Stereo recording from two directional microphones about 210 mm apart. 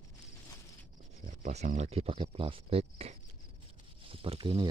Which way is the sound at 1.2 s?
35° right (ahead or behind).